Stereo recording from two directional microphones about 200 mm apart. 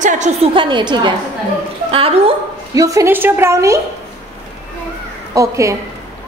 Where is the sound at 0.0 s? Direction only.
35° right (ahead or behind).